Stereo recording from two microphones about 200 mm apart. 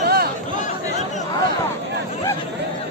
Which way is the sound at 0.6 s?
35° left (ahead or behind).